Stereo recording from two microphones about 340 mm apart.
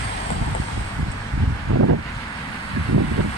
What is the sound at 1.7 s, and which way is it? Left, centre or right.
Vehicle, right.